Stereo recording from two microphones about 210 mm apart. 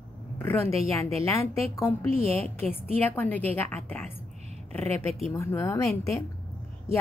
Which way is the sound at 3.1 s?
10° left (ahead or behind).